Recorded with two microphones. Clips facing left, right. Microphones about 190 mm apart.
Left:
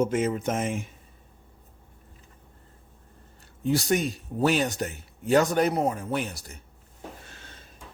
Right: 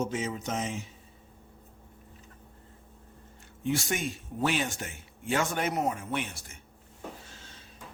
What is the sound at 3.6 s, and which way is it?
A man's voice, 35° left (ahead or behind).